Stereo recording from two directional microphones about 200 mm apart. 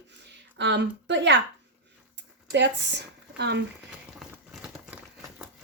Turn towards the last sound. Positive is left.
turn(degrees=-5)  # may be behind; listen again after turning